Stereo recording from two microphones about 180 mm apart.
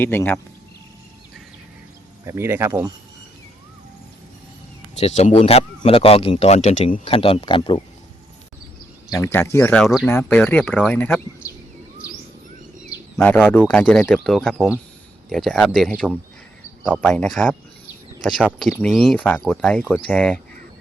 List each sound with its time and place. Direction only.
0.0 s speech: 10° left (ahead or behind)
2.2 s speech: 15° right (ahead or behind)
4.9 s a man's voice: 35° left (ahead or behind)
9.0 s speech: 15° left (ahead or behind)
9.8 s speech: centre (ahead or behind)
10.1 s speech: 10° left (ahead or behind)
12.9 s a sound: 10° left (ahead or behind)
13.7 s speech: 5° left (ahead or behind)